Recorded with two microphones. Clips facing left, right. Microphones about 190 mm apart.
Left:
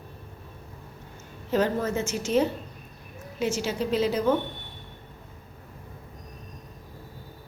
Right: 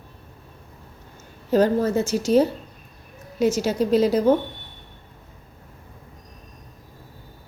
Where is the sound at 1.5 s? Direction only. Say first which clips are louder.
Right 6 dB; 35° right (ahead or behind).